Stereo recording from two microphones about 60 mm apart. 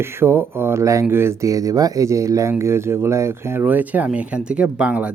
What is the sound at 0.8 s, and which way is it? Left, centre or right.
Speech, right.